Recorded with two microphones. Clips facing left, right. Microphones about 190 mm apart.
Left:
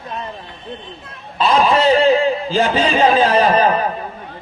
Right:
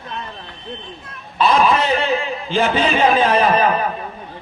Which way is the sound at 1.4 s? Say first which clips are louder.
Left 1 dB; 35° left (ahead or behind).